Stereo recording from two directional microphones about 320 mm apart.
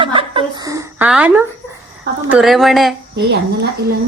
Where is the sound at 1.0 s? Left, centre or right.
Centre.